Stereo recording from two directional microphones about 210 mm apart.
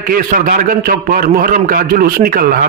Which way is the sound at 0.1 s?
40° right (ahead or behind).